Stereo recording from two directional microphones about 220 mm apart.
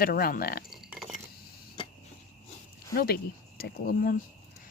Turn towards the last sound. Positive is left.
turn(degrees=40)  # may be behind; listen again after turning